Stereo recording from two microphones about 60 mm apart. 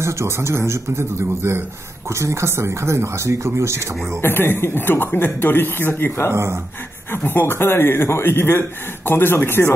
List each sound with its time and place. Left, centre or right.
0.0 s speech: right
4.2 s speech: left
6.3 s speech: right
7.1 s speech: left